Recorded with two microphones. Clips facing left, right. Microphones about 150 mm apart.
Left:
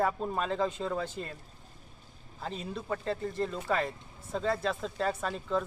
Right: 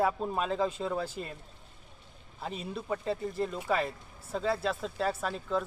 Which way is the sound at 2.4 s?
5° right (ahead or behind).